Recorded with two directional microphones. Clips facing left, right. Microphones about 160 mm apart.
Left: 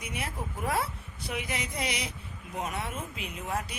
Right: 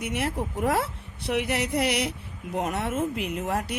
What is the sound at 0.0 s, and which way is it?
A woman's voice, 70° right (ahead or behind).